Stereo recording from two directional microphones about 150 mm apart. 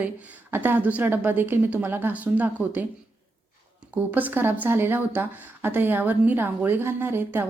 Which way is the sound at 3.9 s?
10° right (ahead or behind).